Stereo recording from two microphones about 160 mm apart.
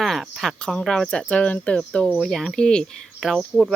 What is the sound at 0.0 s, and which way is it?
Speech, centre (ahead or behind).